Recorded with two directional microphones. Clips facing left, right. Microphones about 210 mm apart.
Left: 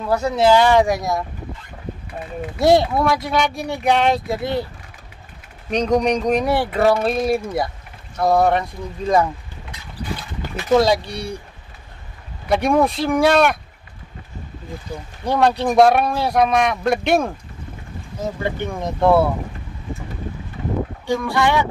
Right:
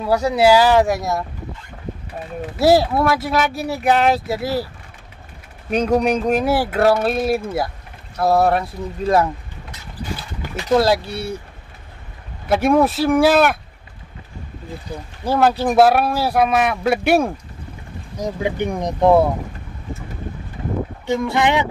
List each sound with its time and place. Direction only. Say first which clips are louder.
0.0 s speech: right 2 dB; 10° right (ahead or behind)
2.6 s speech: right 1 dB; 5° right (ahead or behind)
5.7 s speech: right 1 dB; 5° right (ahead or behind)
10.7 s speech: even; 5° right (ahead or behind)
12.4 s speech: right 2 dB; 5° right (ahead or behind)
15.2 s speech: right 1 dB; 5° right (ahead or behind)
21.1 s speech: right 1 dB; 20° right (ahead or behind)